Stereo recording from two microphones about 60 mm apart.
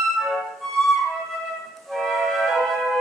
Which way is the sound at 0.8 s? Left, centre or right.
Centre.